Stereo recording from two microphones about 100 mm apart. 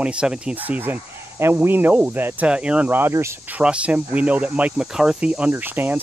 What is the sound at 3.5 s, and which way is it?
Speech, 10° right (ahead or behind).